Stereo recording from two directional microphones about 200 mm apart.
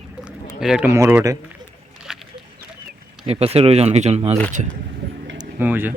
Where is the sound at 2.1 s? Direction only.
5° right (ahead or behind).